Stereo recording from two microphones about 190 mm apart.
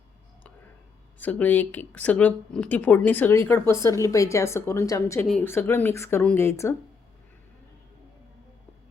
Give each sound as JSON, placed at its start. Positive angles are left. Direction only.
{"t": 1.2, "sound": "speech", "side_deg": 10}